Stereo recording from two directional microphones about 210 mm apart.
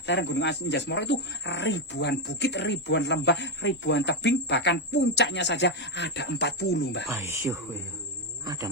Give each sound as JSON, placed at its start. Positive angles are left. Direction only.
{"t": 0.0, "sound": "speech", "side_deg": 60}
{"t": 7.1, "sound": "speech", "side_deg": -15}